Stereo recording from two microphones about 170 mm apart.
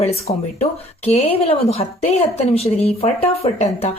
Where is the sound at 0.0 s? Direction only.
40° left (ahead or behind).